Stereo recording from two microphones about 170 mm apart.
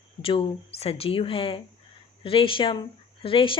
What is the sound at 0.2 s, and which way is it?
Speech, 35° left (ahead or behind).